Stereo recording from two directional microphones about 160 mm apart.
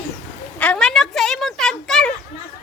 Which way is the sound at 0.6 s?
5° left (ahead or behind).